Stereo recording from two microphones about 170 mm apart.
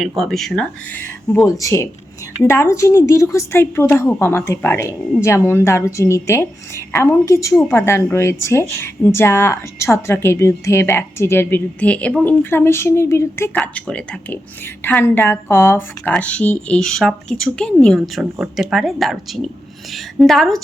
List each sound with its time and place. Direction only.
0.0 s a woman's voice: centre (ahead or behind)